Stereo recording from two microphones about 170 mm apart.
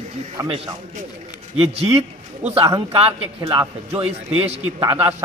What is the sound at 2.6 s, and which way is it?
A man's voice, 20° right (ahead or behind).